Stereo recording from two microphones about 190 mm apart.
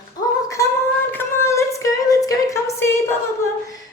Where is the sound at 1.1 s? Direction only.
15° left (ahead or behind).